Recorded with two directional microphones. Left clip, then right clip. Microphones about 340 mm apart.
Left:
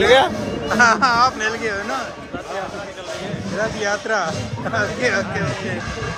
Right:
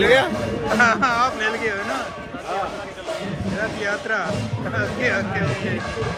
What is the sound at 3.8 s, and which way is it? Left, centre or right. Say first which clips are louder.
Speech: left 2 dB; centre.